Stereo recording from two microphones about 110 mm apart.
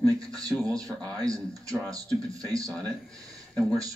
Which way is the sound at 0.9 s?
5° left (ahead or behind).